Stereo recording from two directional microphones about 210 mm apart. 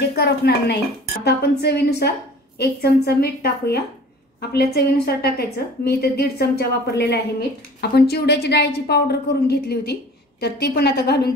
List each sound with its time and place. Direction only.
0.1 s a woman's voice: 50° left (ahead or behind)